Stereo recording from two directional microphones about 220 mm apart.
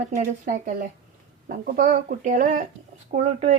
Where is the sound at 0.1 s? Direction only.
35° right (ahead or behind).